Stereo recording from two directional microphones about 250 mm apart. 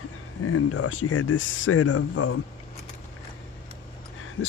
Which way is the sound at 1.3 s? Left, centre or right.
Left.